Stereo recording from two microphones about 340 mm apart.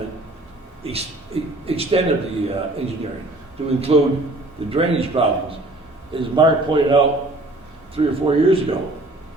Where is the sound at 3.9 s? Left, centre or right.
Centre.